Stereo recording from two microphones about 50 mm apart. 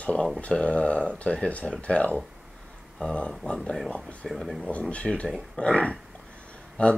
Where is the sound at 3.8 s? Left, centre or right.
Centre.